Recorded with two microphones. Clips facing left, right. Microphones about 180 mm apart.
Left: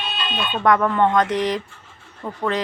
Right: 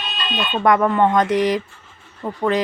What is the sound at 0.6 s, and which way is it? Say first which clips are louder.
A woman's voice: right 2 dB; 10° right (ahead or behind).